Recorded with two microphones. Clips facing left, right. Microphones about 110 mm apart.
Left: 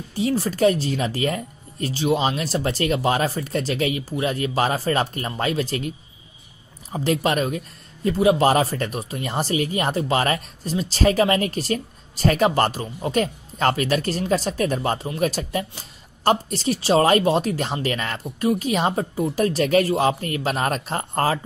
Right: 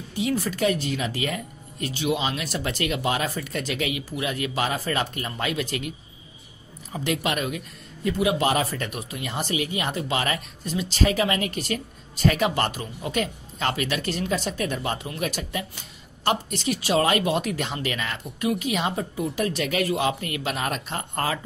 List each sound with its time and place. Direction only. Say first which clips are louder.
0.1 s speech: left 3 dB; 35° left (ahead or behind)